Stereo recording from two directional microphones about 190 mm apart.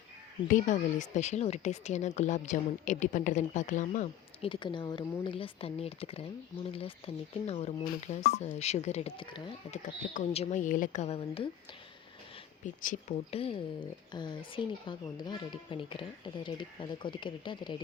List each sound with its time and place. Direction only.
0.5 s speech: 40° left (ahead or behind)
4.4 s speech: 25° left (ahead or behind)
9.7 s speech: 40° left (ahead or behind)
12.6 s speech: 40° left (ahead or behind); by 17.7 s 25° left (ahead or behind)